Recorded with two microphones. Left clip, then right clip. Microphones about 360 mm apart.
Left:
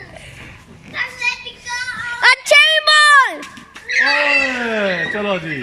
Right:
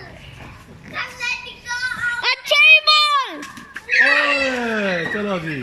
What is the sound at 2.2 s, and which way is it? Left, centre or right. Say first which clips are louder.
Music: left 5 dB; centre.